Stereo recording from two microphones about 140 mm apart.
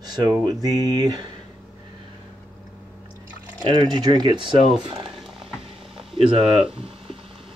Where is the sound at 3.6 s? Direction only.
35° right (ahead or behind).